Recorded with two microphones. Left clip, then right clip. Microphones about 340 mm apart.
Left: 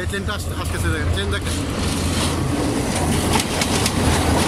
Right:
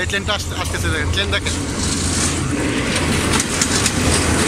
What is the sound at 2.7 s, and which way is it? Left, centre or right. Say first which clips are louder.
Vehicle: right 3 dB; left.